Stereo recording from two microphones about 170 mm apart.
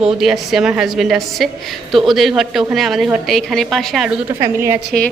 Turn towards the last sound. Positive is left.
turn(degrees=-15)  # may be behind; listen again after turning